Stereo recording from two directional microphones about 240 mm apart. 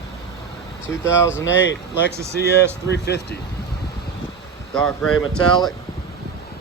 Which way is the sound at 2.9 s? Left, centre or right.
Left.